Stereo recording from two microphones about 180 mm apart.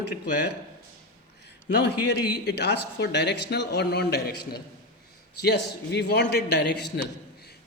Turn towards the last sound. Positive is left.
turn(degrees=65)  # may be behind; listen again after turning